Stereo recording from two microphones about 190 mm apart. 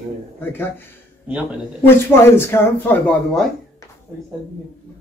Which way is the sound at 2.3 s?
10° left (ahead or behind).